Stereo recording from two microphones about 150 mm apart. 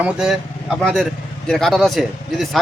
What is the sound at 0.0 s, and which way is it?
A man's voice, 5° right (ahead or behind).